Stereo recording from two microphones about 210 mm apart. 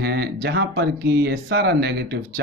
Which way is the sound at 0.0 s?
50° right (ahead or behind).